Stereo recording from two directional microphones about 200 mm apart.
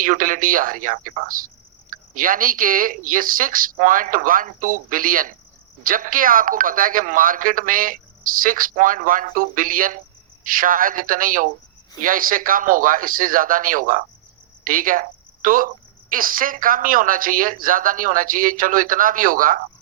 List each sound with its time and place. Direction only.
0.0 s speech: 40° right (ahead or behind)